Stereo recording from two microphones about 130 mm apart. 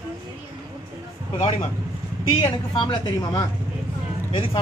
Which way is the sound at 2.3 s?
40° left (ahead or behind).